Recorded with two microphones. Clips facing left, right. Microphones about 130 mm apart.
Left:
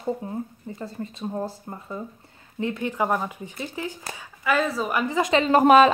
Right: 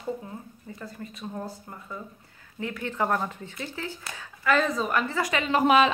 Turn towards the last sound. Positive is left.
turn(degrees=45)  # may be behind; listen again after turning